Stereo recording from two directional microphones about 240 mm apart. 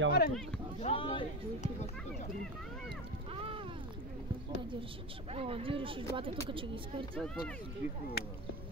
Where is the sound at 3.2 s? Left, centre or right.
Right.